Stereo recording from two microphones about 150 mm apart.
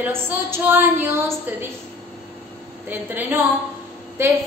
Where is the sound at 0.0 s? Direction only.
15° right (ahead or behind).